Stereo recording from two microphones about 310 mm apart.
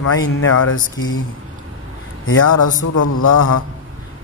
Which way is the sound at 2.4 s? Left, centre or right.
Left.